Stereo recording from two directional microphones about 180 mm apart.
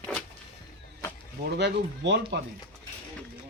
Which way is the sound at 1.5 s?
75° right (ahead or behind).